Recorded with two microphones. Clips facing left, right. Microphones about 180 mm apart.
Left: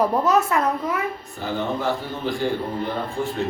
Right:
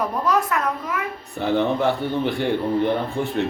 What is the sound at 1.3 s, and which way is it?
A man's voice, 65° right (ahead or behind).